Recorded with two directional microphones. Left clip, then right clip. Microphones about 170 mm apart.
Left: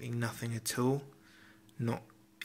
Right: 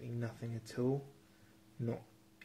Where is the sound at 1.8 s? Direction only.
20° left (ahead or behind).